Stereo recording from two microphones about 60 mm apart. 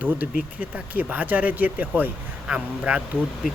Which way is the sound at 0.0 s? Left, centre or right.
Right.